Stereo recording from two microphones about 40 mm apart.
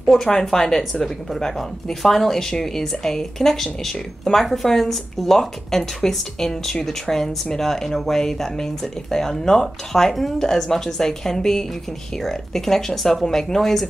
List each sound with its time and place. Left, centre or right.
0.0 s speech: centre